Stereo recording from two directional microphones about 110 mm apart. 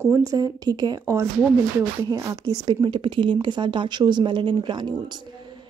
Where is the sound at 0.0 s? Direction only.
30° right (ahead or behind).